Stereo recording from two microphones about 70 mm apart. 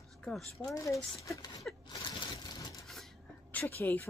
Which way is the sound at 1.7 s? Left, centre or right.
Centre.